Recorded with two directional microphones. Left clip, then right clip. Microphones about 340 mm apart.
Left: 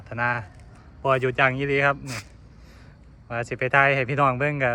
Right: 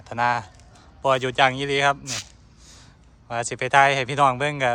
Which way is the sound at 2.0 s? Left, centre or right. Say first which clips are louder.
Right 4 dB; centre.